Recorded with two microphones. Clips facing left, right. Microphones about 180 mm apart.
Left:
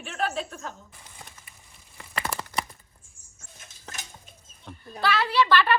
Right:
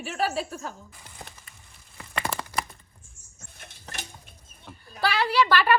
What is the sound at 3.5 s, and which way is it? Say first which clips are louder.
Stir: right 2 dB; 60° right (ahead or behind).